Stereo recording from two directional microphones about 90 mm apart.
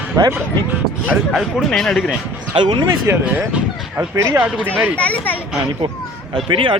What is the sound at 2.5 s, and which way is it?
Speech, 80° right.